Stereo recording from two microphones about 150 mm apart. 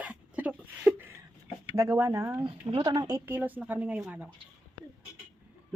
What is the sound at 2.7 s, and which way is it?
Speech, 30° right (ahead or behind).